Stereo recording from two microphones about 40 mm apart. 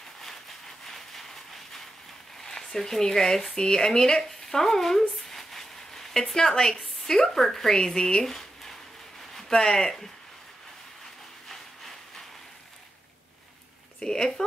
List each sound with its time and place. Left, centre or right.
0.8 s a sound: centre
2.4 s speech: centre
5.3 s a sound: centre
6.5 s a woman's voice: left
7.1 s speech: centre
13.9 s speech: centre